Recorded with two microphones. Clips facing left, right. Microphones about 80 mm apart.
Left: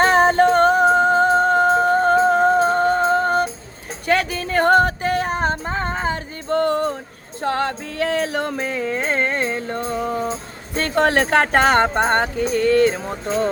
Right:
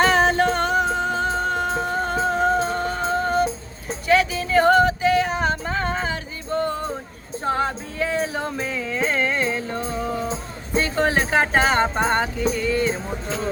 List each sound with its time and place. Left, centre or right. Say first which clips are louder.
0.0 s music: left 4 dB; left
4.0 s a sound: right 1 dB; left
6.5 s music: left 5 dB; left
8.5 s music: left 3 dB; left
10.8 s speech: left 3 dB; left